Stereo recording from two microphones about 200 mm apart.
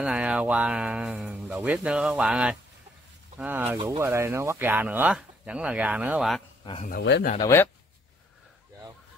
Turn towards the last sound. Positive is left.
turn(degrees=15)  # may be behind; listen again after turning